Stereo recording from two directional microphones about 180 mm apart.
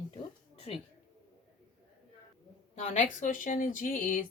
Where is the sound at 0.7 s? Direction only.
35° left (ahead or behind).